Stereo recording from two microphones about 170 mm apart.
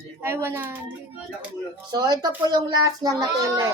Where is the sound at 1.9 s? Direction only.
25° right (ahead or behind).